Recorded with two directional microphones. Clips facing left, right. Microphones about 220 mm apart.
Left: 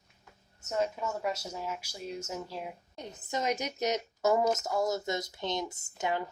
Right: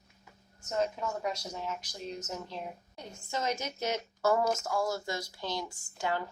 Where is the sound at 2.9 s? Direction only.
20° left (ahead or behind).